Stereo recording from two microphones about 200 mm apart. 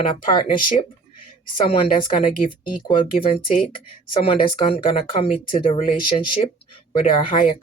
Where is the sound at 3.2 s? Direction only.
30° left (ahead or behind).